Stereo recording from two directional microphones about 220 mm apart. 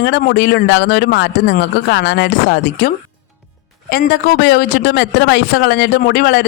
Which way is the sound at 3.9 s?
45° left (ahead or behind).